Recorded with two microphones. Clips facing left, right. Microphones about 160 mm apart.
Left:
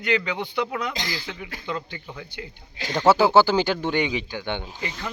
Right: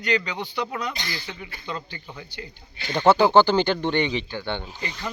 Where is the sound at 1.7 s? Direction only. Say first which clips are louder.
Left 2 dB; 10° left (ahead or behind).